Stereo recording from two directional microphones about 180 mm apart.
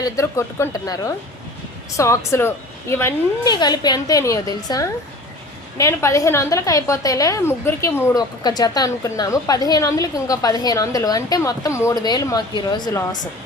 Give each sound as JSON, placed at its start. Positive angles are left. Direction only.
{"t": 0.0, "sound": "a woman's voice", "side_deg": 15}